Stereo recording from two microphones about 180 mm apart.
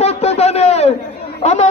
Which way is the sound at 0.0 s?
35° left (ahead or behind).